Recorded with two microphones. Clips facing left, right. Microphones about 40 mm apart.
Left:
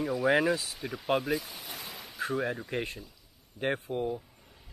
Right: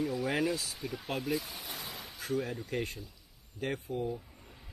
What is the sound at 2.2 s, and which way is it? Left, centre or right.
Speech, left.